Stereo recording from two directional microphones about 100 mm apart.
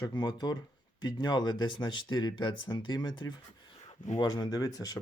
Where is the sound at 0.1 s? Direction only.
45° left (ahead or behind).